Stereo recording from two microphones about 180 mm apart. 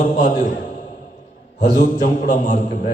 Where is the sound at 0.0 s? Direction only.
45° left (ahead or behind).